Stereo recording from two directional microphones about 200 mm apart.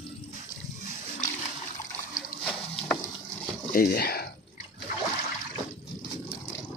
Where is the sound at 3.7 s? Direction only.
50° left (ahead or behind).